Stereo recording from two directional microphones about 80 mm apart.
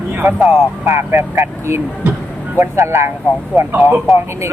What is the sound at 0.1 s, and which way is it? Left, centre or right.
Vehicle, right.